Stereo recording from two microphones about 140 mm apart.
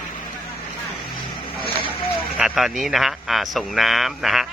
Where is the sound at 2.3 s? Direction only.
5° right (ahead or behind).